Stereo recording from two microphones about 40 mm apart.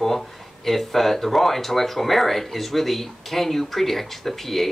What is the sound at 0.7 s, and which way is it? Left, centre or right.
Speech, centre.